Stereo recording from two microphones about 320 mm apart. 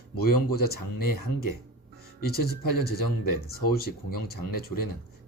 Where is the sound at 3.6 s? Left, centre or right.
Left.